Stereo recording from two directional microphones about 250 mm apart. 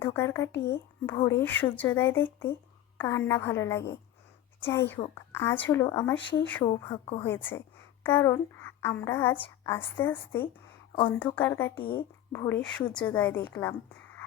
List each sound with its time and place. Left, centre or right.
0.0 s speech: centre
0.5 s speech: left
1.1 s a child's voice: centre
11.8 s speech: centre
12.3 s speech: centre